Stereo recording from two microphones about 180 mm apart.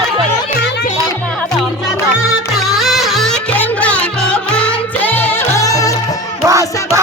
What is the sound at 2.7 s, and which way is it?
Music, centre (ahead or behind).